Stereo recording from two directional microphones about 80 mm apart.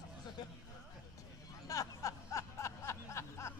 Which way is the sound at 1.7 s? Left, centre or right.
Left.